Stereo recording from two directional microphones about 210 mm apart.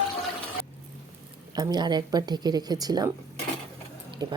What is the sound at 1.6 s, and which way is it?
Speech, 20° right (ahead or behind).